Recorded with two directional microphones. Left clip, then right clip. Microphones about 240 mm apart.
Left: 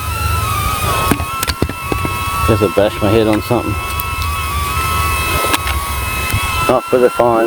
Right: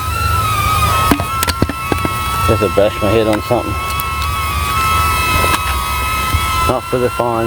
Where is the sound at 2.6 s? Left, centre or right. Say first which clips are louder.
Even; left.